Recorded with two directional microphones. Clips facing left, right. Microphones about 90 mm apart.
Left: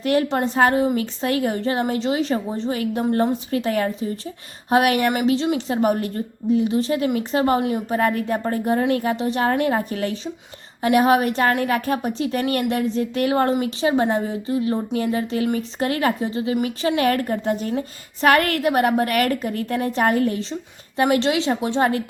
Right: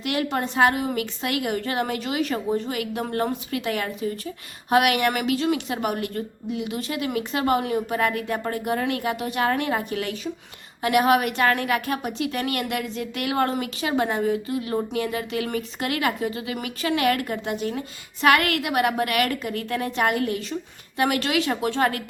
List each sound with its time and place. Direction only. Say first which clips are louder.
0.0 s a woman's voice: left 6 dB; 35° left (ahead or behind)